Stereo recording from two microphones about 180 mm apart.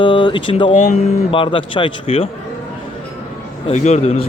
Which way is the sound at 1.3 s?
30° left (ahead or behind).